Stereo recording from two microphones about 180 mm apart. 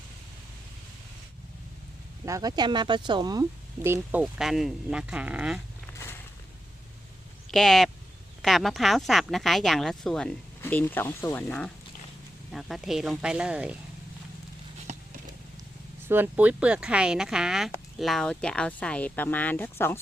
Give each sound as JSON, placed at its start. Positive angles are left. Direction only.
{"t": 2.2, "sound": "speech", "side_deg": -20}
{"t": 3.8, "sound": "speech", "side_deg": -10}
{"t": 7.5, "sound": "speech", "side_deg": 0}
{"t": 16.0, "sound": "speech", "side_deg": -10}